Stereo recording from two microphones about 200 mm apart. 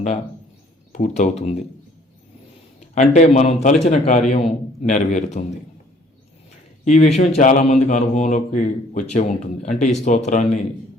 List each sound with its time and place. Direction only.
0.9 s a man's voice: 35° left (ahead or behind)
2.9 s a man's voice: 35° left (ahead or behind)
6.8 s a man's voice: 35° left (ahead or behind)